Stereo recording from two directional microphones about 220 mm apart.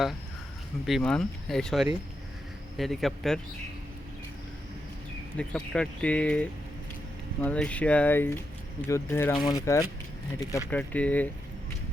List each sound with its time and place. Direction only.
0.9 s speech: centre (ahead or behind)
5.4 s speech: 5° left (ahead or behind)